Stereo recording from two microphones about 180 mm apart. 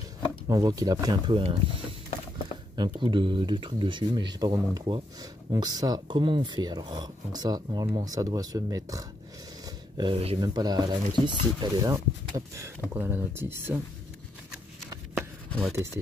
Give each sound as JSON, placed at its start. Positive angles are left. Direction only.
{"t": 0.5, "sound": "speech", "side_deg": -20}
{"t": 9.9, "sound": "speech", "side_deg": -30}
{"t": 15.1, "sound": "chopping", "side_deg": 5}